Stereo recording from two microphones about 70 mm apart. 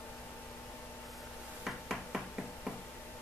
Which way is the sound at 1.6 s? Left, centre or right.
Centre.